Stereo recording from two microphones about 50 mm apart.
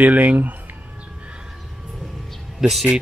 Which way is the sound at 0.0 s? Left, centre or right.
Right.